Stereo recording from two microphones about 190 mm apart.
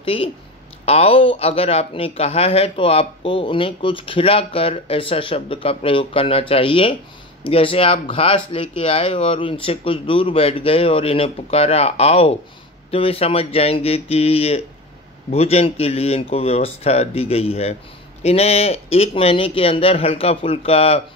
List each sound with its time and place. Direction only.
0.0 s speech: 30° left (ahead or behind)